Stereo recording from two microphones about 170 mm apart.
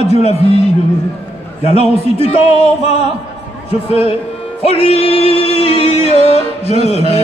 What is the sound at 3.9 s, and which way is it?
Music, 35° left (ahead or behind).